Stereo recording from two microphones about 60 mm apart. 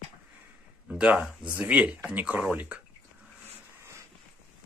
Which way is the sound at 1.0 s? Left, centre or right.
Right.